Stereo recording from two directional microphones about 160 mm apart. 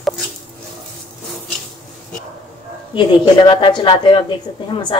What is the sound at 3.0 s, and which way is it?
Speech, 30° left (ahead or behind).